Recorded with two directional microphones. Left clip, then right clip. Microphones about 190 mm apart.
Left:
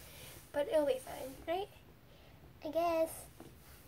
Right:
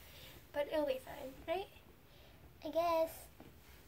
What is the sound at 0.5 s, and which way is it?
A woman's voice, 30° left (ahead or behind).